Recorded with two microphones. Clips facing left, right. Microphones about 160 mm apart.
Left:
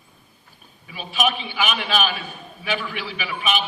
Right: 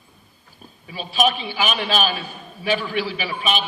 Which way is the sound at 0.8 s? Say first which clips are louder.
Right 3 dB; 35° right (ahead or behind).